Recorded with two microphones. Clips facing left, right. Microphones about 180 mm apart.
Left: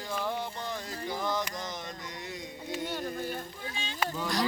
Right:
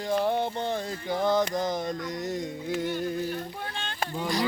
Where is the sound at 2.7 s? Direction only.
60° right (ahead or behind).